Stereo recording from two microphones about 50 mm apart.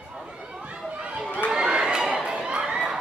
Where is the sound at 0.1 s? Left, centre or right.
Centre.